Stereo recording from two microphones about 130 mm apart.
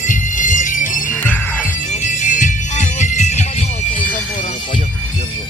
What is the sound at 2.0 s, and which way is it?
Music, 70° left (ahead or behind).